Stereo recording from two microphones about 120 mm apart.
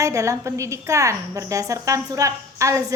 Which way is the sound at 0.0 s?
25° right (ahead or behind).